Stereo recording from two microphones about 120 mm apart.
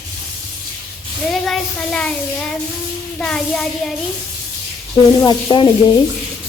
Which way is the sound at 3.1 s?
5° left (ahead or behind).